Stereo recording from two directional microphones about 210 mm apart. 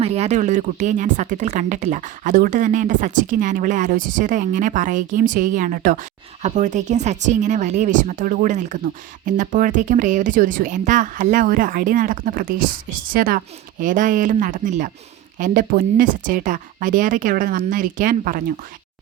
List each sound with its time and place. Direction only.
0.0 s speech: 30° right (ahead or behind)